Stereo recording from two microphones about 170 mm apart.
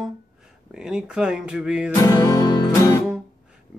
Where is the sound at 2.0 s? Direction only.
20° left (ahead or behind).